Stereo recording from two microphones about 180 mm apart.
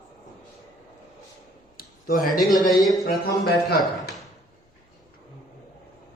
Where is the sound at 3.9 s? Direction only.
Centre (ahead or behind).